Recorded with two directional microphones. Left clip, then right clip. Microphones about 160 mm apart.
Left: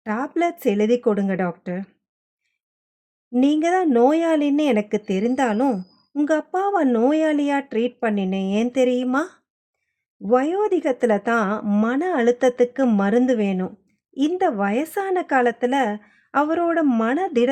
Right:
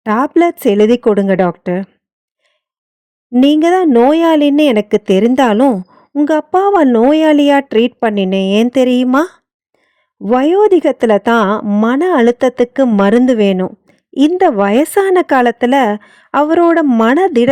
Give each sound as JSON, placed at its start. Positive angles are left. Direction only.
{"t": 0.0, "sound": "speech", "side_deg": -50}
{"t": 3.4, "sound": "speech", "side_deg": -50}